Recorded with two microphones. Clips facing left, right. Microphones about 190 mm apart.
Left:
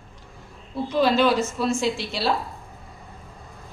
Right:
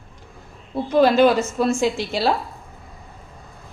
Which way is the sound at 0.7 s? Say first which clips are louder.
Right 5 dB; 50° right (ahead or behind).